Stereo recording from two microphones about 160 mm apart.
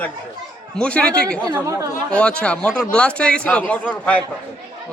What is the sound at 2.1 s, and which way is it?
A man's voice, 5° left (ahead or behind).